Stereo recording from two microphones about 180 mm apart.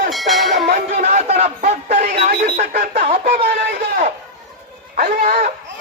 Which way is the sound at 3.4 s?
65° right (ahead or behind).